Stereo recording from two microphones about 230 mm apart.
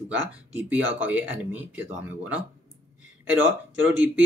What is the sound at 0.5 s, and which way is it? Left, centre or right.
Speech, centre.